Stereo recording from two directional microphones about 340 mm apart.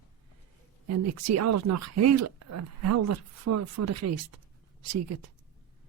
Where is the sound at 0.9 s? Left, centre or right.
Right.